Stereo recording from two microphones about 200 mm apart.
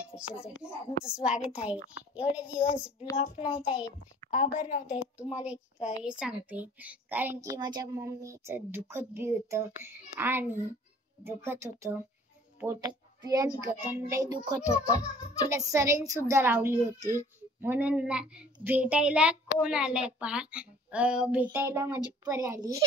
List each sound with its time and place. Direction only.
0.0 s a woman's voice: 5° right (ahead or behind)
4.6 s a woman's voice: 45° left (ahead or behind)
4.8 s a woman's voice: 5° right (ahead or behind)
14.7 s music: 20° left (ahead or behind)
15.5 s a woman's voice: 15° right (ahead or behind)